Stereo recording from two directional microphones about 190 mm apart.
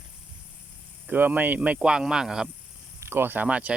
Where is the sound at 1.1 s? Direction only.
10° right (ahead or behind).